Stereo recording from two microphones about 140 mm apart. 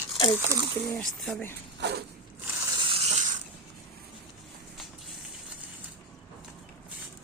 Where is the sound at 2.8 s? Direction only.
40° right (ahead or behind).